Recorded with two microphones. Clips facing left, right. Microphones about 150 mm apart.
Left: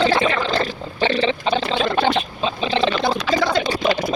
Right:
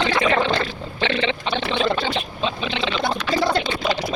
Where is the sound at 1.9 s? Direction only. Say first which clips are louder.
Left 6 dB; 55° left (ahead or behind).